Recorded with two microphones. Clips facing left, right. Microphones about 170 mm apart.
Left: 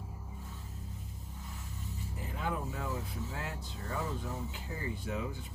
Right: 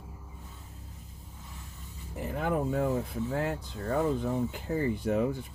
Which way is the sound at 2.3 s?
50° right (ahead or behind).